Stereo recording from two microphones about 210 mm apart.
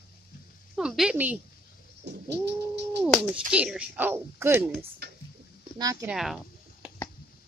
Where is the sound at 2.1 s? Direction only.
55° right (ahead or behind).